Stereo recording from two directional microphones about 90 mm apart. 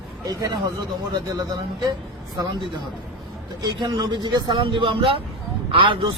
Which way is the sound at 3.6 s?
55° right (ahead or behind).